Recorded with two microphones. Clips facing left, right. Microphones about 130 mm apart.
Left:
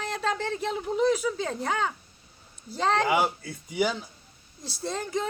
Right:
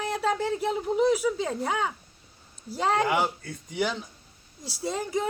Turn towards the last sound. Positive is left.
turn(degrees=-10)  # may be behind; listen again after turning